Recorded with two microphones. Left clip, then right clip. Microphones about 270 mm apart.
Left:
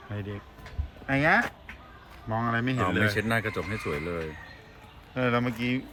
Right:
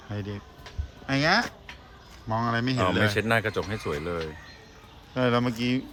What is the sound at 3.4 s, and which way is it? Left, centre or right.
Speech, right.